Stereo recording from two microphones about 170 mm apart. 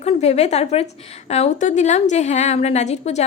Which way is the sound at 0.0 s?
40° left (ahead or behind).